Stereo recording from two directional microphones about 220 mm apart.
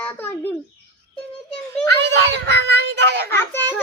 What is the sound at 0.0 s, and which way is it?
Bird, 10° left (ahead or behind).